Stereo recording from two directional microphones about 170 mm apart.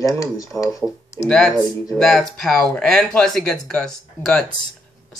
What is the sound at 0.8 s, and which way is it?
Speech, 5° right (ahead or behind).